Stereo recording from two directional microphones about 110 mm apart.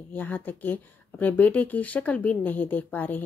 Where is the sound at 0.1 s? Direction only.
15° left (ahead or behind).